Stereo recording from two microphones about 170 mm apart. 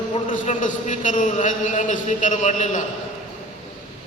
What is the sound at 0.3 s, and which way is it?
A man's voice, 50° left (ahead or behind).